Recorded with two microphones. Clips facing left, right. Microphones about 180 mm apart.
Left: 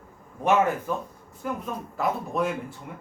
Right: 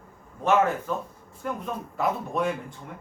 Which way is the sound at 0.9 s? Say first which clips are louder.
Left 1 dB; 10° left (ahead or behind).